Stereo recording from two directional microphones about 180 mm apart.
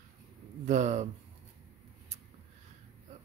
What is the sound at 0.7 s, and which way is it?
Speech, 40° right (ahead or behind).